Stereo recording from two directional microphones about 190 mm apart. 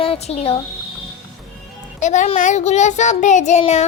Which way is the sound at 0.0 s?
30° left (ahead or behind).